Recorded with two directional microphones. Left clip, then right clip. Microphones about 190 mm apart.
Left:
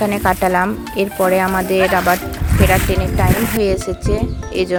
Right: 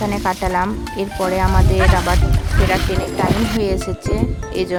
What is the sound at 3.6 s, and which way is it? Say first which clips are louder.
Speech: left 3 dB; 15° left (ahead or behind).